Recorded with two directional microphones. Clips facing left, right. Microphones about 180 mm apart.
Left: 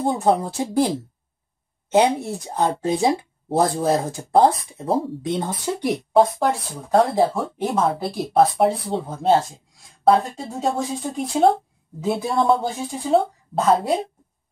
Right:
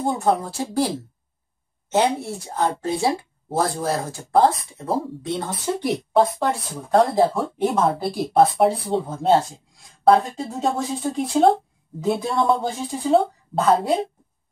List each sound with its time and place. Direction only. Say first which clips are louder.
0.0 s speech: left 2 dB; 15° left (ahead or behind)
1.9 s speech: left 3 dB; 15° left (ahead or behind)
6.4 s a woman's voice: left 2 dB; centre (ahead or behind)